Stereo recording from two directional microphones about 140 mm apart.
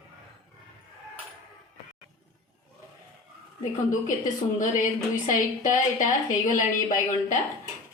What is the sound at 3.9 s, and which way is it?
A woman's voice, 65° left (ahead or behind).